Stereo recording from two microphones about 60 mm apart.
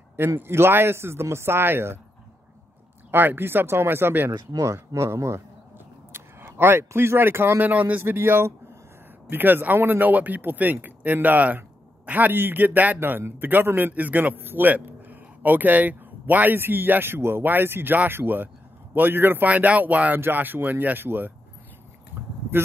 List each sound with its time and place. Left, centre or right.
0.4 s speech: right
3.1 s a man's voice: right
4.5 s speech: right
4.7 s speech: right
6.1 s a sound: right
6.9 s a man's voice: right
7.7 s speech: right
8.0 s a man's voice: right
19.5 s a man's voice: right